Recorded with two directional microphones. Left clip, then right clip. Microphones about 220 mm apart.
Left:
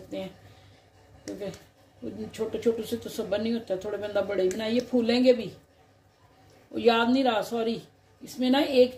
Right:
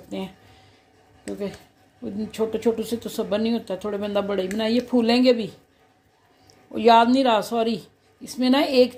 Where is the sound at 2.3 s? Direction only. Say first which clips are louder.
Right 4 dB; 45° right (ahead or behind).